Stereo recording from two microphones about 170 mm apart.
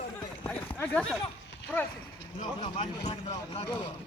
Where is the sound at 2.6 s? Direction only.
30° left (ahead or behind).